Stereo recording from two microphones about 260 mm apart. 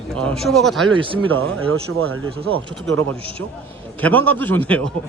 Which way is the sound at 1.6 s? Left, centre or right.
Right.